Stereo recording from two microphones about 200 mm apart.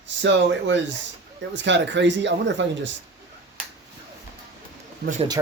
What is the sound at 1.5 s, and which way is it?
Speech, 60° right (ahead or behind).